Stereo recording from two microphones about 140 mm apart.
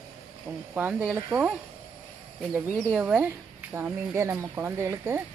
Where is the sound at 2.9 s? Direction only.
10° right (ahead or behind).